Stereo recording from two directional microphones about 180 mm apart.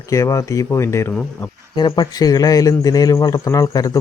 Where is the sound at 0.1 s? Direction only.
20° left (ahead or behind).